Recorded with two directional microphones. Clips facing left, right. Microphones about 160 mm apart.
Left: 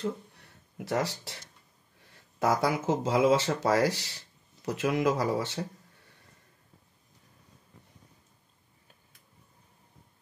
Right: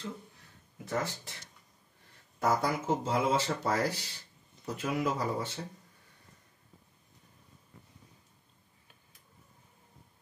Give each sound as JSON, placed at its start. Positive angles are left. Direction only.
{"t": 0.7, "sound": "speech", "side_deg": 80}
{"t": 2.4, "sound": "speech", "side_deg": 90}